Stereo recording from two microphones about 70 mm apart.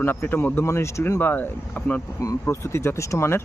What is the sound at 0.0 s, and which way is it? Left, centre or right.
Speech, left.